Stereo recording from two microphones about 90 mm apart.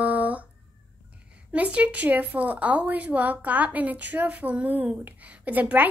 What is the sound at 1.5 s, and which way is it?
A woman's voice, 15° right (ahead or behind).